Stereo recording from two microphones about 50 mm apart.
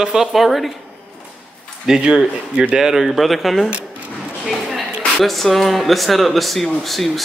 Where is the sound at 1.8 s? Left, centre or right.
Centre.